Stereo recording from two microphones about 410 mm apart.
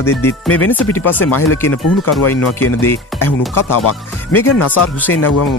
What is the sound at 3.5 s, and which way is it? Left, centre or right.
Speech, left.